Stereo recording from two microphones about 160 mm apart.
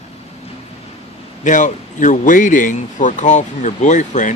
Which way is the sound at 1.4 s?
50° left (ahead or behind).